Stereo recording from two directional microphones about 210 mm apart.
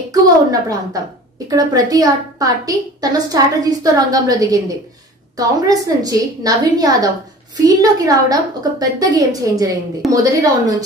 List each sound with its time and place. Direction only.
0.1 s a woman's voice: 15° right (ahead or behind)
5.7 s a woman's voice: 15° right (ahead or behind)